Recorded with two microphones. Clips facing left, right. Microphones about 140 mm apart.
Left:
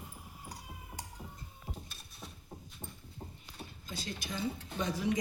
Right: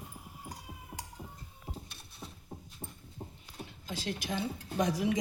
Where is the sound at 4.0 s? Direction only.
90° right.